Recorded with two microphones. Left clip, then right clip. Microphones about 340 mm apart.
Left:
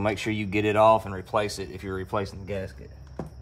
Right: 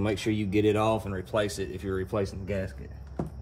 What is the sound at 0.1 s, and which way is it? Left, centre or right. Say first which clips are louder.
Speech: even; centre.